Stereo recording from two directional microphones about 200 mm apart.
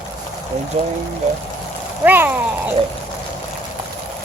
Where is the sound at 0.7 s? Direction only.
35° right (ahead or behind).